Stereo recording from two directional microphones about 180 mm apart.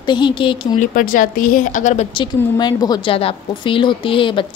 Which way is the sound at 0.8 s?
50° left (ahead or behind).